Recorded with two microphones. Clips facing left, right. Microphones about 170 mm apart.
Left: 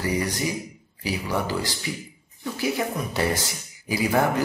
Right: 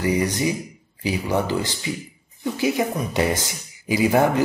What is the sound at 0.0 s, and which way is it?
Speech, 20° right (ahead or behind).